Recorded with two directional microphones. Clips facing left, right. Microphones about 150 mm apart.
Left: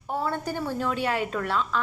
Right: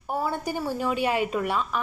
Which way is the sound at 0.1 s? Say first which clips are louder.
Right 1 dB; 10° right (ahead or behind).